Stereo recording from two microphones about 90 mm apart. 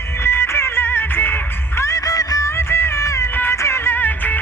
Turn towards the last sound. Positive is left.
turn(degrees=20)  # may be behind; listen again after turning